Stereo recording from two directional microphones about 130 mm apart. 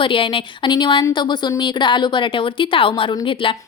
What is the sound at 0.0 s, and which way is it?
A woman's voice, 40° left (ahead or behind).